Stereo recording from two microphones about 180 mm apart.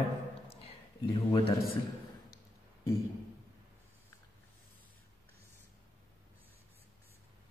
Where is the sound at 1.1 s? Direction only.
30° left (ahead or behind).